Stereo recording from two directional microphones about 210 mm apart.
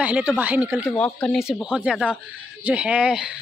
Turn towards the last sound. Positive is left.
turn(degrees=-5)  # may be behind; listen again after turning